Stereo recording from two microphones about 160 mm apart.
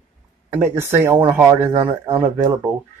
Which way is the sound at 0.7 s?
15° right (ahead or behind).